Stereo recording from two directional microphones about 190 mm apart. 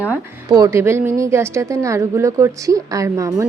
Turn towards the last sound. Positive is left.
turn(degrees=-15)  # may be behind; listen again after turning